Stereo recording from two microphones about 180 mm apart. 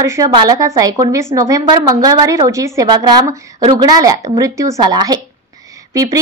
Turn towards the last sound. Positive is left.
turn(degrees=-20)  # may be behind; listen again after turning